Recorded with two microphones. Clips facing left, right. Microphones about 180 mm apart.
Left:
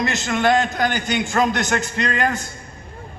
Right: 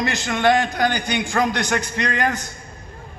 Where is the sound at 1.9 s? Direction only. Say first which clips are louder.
Left 1 dB; 20° right (ahead or behind).